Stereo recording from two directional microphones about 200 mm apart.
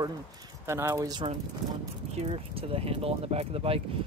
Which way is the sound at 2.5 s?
30° right (ahead or behind).